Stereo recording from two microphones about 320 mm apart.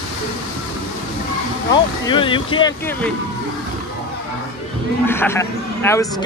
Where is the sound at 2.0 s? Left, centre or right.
Centre.